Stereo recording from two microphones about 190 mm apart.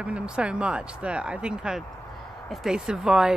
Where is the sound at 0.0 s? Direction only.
5° right (ahead or behind).